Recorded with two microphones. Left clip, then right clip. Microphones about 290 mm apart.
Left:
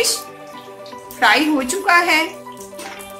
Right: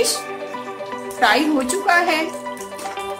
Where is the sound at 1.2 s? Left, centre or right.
Centre.